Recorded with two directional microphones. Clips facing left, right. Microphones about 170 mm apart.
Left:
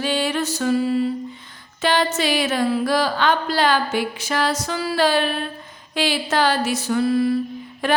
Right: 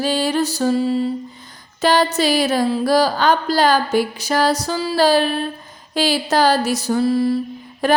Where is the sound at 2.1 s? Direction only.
35° right (ahead or behind).